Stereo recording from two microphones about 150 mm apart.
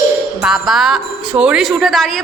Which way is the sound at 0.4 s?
5° right (ahead or behind).